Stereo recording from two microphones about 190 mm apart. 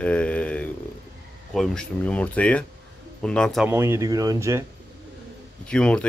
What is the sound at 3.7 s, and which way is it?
Speech, 15° right (ahead or behind).